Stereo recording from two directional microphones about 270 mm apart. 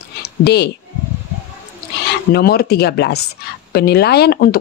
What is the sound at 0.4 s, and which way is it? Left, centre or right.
Speech, left.